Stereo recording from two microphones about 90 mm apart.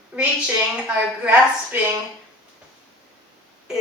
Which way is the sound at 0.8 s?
15° right (ahead or behind).